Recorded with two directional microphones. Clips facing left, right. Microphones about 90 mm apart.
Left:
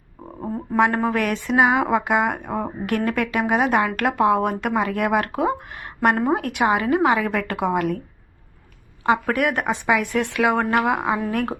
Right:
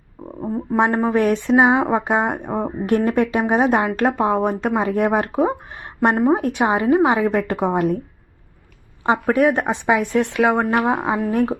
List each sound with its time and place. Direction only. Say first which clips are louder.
0.4 s a sound: right 4 dB; 5° right (ahead or behind)
0.8 s speech: right 2 dB; 20° right (ahead or behind)
9.0 s speech: right 3 dB; 25° right (ahead or behind)